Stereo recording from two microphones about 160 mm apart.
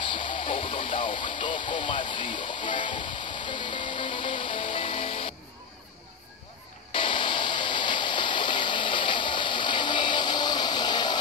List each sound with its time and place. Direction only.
0.0 s radio: 30° left (ahead or behind)
3.4 s music: 30° left (ahead or behind)
6.9 s a sound: 30° left (ahead or behind)